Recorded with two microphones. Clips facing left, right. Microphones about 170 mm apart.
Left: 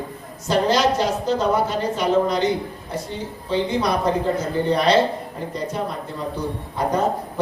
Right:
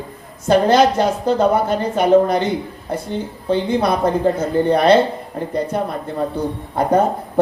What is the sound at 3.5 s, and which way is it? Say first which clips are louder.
A woman's voice: right 4 dB; 55° right (ahead or behind).